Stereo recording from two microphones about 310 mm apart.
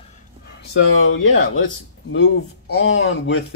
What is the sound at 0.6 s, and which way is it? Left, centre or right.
Speech, left.